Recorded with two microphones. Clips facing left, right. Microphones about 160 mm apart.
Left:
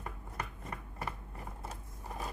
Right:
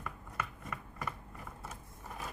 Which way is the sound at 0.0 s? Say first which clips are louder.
Right 1 dB; 35° left (ahead or behind).